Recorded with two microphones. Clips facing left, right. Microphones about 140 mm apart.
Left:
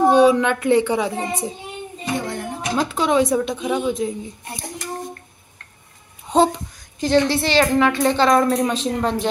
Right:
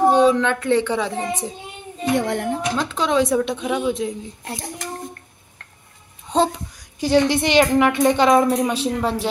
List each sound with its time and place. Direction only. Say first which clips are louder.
0.1 s speech: left 2 dB; 10° left (ahead or behind)
2.1 s speech: right 5 dB; 75° right (ahead or behind)
2.7 s a woman's voice: left 4 dB; 10° left (ahead or behind)
6.3 s a woman's voice: left 3 dB; centre (ahead or behind)
7.0 s a woman's voice: even; 10° right (ahead or behind)